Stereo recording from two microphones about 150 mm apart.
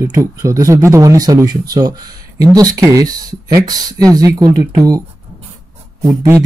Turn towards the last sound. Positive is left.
turn(degrees=-25)  # may be behind; listen again after turning